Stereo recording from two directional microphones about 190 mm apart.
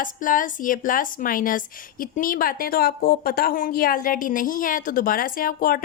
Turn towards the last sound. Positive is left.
turn(degrees=50)  # may be behind; listen again after turning